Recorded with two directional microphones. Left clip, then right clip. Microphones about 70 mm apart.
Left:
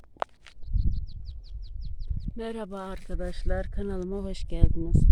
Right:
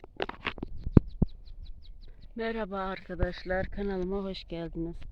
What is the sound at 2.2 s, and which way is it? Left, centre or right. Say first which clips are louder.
Speech: right 2 dB; left.